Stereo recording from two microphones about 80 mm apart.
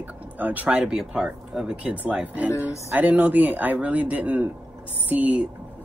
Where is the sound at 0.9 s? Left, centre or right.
Centre.